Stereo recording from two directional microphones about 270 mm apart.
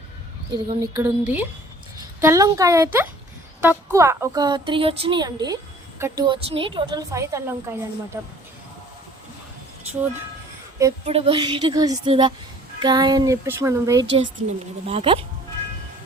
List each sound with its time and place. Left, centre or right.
0.5 s a woman's voice: centre
11.0 s a woman's voice: centre